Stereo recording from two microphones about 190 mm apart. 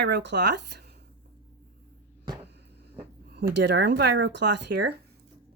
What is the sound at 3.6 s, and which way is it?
Speech, 65° right (ahead or behind).